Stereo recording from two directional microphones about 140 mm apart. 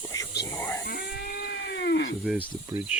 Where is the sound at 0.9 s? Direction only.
90° left.